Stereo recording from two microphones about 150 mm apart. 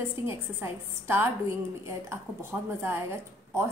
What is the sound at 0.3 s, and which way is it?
Speech, 15° right (ahead or behind).